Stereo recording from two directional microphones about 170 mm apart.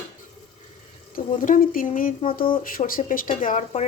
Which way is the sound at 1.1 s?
50° left (ahead or behind).